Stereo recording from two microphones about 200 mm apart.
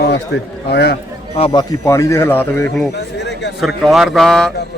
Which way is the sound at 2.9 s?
60° left (ahead or behind).